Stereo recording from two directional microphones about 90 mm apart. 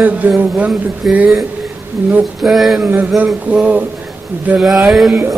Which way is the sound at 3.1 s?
15° right (ahead or behind).